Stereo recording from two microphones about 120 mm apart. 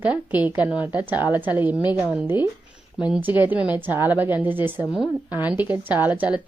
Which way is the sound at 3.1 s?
15° right (ahead or behind).